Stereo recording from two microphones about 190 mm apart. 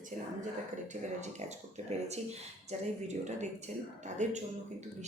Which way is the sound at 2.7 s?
40° right (ahead or behind).